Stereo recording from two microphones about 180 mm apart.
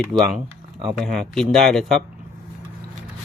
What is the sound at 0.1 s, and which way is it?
Speech, 25° right (ahead or behind).